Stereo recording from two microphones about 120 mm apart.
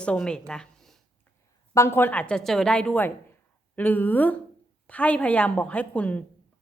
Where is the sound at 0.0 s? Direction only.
5° left (ahead or behind).